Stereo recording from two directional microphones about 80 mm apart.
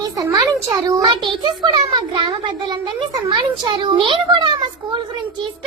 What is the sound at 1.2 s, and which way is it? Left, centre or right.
A child's voice, right.